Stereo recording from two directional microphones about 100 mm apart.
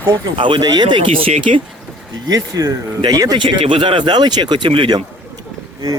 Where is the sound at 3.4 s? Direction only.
55° right (ahead or behind).